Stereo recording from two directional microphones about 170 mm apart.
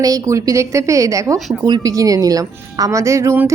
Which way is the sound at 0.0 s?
20° right (ahead or behind).